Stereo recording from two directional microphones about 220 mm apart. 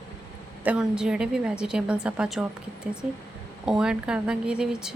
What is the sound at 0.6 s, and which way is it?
A woman's voice, 5° right (ahead or behind).